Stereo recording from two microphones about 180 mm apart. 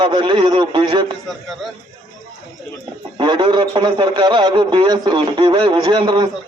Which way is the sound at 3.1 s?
25° right (ahead or behind).